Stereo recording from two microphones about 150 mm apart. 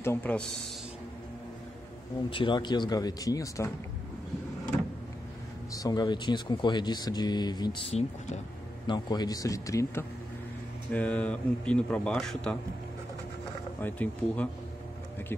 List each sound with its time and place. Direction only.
0.0 s speech: 15° left (ahead or behind)
2.3 s speech: 30° left (ahead or behind)
5.7 s speech: 25° left (ahead or behind)
10.9 s speech: 10° left (ahead or behind)
13.7 s speech: 10° left (ahead or behind)